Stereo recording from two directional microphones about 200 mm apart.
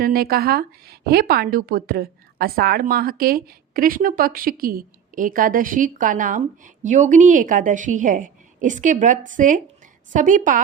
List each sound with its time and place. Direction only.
0.0 s a woman's voice: 50° right (ahead or behind)